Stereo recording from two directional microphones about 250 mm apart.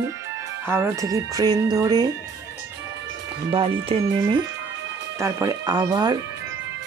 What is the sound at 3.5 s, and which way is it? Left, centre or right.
Speech, right.